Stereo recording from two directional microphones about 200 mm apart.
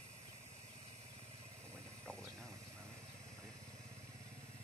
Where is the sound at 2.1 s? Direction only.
5° left (ahead or behind).